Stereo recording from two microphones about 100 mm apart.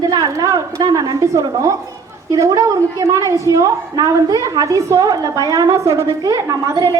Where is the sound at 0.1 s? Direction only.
35° right (ahead or behind).